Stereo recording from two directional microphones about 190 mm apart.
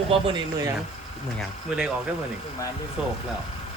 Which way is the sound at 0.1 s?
30° right (ahead or behind).